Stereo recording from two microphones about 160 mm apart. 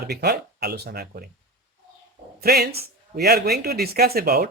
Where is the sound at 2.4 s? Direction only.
80° right.